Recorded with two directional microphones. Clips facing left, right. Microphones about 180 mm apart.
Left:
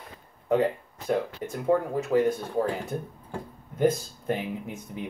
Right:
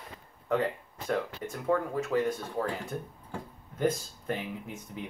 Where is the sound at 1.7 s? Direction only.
15° left (ahead or behind).